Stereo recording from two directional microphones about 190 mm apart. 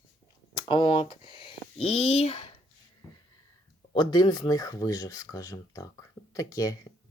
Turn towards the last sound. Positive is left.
turn(degrees=20)  # may be behind; listen again after turning